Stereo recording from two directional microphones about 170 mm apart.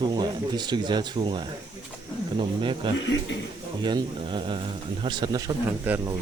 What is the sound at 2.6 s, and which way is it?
Speech, 30° right (ahead or behind).